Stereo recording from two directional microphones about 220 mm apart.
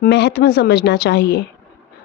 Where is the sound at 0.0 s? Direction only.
50° left (ahead or behind).